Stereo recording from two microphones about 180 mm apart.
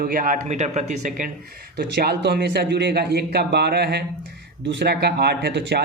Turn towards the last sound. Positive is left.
turn(degrees=-65)  # may be behind; listen again after turning